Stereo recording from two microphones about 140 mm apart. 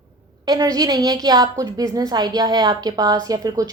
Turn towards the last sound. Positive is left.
turn(degrees=-25)  # may be behind; listen again after turning